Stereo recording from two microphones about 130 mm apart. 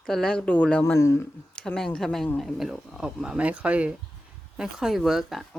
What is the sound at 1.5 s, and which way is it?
Speech, 5° left (ahead or behind).